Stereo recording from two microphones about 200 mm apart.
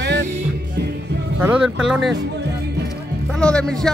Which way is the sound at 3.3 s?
5° left (ahead or behind).